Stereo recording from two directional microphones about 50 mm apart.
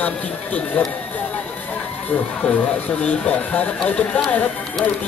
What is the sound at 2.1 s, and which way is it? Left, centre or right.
Speech, left.